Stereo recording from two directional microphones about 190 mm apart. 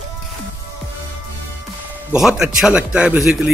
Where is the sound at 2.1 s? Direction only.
Centre (ahead or behind).